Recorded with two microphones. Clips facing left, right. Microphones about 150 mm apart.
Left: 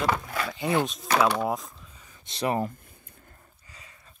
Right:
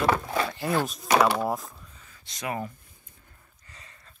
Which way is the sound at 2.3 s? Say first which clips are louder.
Left 6 dB; 30° left (ahead or behind).